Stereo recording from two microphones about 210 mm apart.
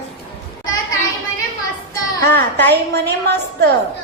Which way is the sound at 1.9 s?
10° left (ahead or behind).